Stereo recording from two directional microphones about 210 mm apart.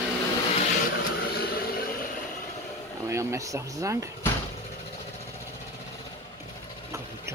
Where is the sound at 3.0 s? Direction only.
15° right (ahead or behind).